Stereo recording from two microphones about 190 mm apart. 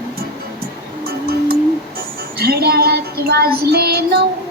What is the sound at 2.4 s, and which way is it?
Child singing, 55° right (ahead or behind).